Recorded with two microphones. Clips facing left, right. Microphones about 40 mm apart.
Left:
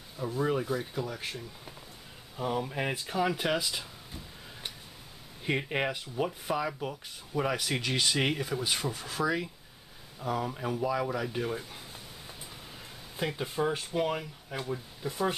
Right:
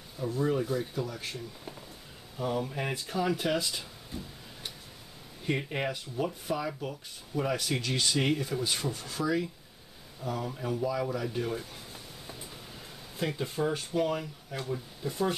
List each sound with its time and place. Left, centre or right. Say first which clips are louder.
0.2 s speech: right 1 dB; centre
5.4 s speech: left 1 dB; centre